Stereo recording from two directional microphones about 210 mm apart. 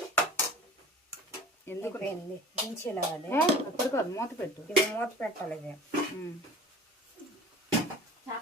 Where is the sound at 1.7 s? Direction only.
10° left (ahead or behind).